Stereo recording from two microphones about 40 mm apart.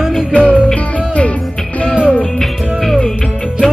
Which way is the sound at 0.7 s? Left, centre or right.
Left.